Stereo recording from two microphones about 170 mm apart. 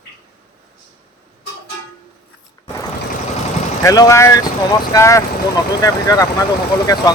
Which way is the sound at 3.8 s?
20° left (ahead or behind).